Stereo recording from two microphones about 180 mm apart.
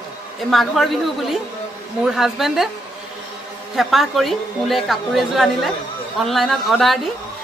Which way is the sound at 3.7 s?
Centre (ahead or behind).